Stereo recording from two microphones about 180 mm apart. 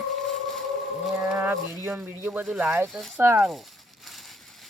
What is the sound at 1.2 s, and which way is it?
A man's voice, 5° right (ahead or behind).